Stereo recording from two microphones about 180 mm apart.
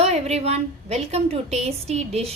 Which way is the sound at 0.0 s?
35° right (ahead or behind).